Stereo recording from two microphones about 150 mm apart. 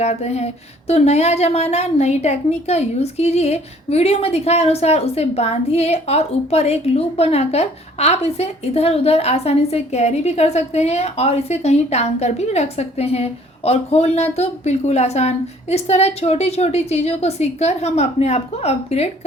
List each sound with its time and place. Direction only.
0.0 s speech: 45° left (ahead or behind)